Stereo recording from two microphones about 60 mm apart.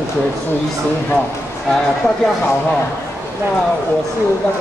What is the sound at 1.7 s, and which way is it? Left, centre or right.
Speech, centre.